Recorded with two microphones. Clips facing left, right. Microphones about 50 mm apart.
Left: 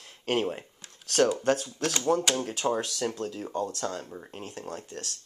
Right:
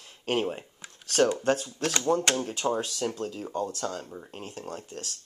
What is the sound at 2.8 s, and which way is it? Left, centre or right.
Speech, centre.